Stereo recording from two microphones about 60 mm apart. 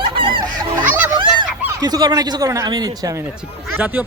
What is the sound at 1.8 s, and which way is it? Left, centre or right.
Speech, right.